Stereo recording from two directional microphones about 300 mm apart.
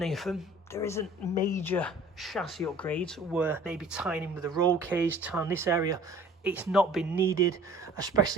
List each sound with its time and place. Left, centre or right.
0.0 s speech: centre